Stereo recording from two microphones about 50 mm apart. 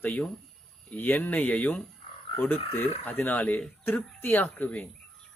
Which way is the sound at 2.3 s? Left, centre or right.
Left.